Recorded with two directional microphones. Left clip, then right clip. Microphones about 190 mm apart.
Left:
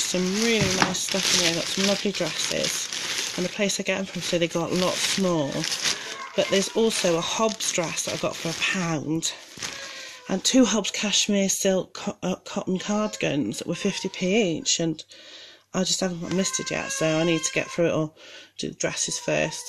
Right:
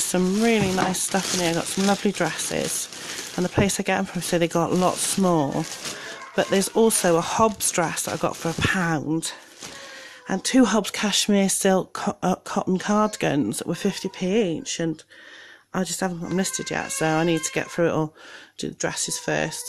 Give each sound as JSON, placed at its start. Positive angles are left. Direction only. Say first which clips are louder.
{"t": 0.1, "sound": "speech", "louder": "right 5 dB", "side_deg": -25}
{"t": 2.0, "sound": "speech", "louder": "right 2 dB", "side_deg": -25}
{"t": 3.6, "sound": "speech", "louder": "right 2 dB", "side_deg": -25}
{"t": 10.6, "sound": "speech", "louder": "right 2 dB", "side_deg": -20}